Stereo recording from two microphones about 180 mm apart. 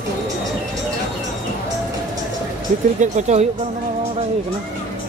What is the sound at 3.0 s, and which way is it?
Speech, 40° right (ahead or behind).